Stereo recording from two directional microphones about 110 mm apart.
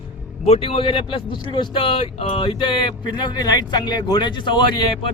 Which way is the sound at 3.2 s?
40° left (ahead or behind).